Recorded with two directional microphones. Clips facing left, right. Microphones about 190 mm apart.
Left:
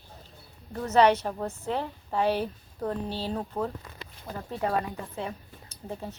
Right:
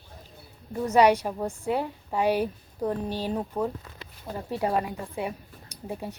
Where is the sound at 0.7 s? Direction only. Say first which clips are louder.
Right 1 dB; 10° right (ahead or behind).